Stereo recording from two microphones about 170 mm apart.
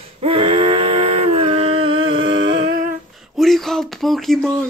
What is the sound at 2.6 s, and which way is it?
Humming, 55° right (ahead or behind).